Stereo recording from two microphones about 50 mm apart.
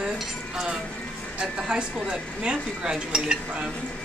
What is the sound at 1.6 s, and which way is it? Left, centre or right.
Speech, centre.